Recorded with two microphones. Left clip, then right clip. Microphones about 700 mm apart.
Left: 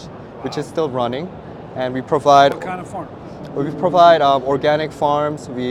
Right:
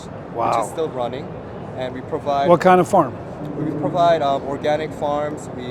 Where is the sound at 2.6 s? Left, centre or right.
Right.